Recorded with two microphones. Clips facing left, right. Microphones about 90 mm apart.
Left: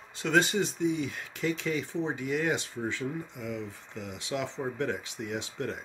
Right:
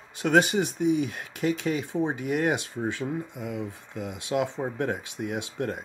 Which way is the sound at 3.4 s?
55° right (ahead or behind).